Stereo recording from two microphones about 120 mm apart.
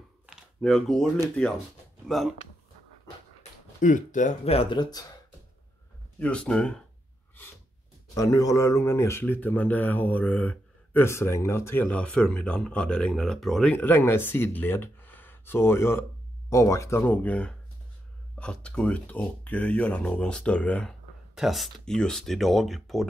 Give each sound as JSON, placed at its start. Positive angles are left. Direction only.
{"t": 0.6, "sound": "speech", "side_deg": 5}
{"t": 3.8, "sound": "speech", "side_deg": 90}
{"t": 4.5, "sound": "speech", "side_deg": 50}
{"t": 6.1, "sound": "speech", "side_deg": 10}
{"t": 8.1, "sound": "speech", "side_deg": 30}
{"t": 13.7, "sound": "speech", "side_deg": 15}
{"t": 21.4, "sound": "speech", "side_deg": 0}